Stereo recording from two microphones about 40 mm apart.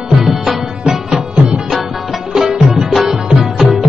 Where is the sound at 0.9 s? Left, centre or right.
Centre.